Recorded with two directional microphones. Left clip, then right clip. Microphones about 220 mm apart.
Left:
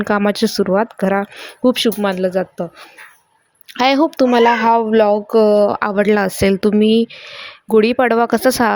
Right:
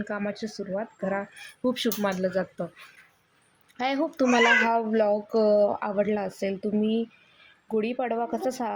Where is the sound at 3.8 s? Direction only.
40° left (ahead or behind).